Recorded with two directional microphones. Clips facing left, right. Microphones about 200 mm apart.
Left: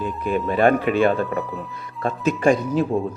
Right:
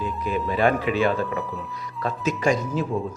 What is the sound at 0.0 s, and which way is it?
Speech, 55° left (ahead or behind).